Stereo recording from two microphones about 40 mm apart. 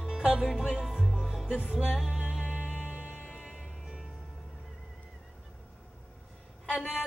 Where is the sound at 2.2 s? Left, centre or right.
Centre.